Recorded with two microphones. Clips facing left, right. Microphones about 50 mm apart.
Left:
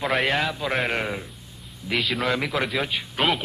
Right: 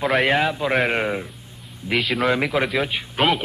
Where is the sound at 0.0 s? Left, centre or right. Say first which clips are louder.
Right 4 dB; centre.